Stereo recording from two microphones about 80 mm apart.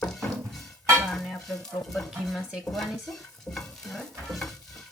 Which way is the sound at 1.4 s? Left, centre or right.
Centre.